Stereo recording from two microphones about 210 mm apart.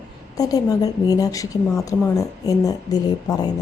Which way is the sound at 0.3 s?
15° left (ahead or behind).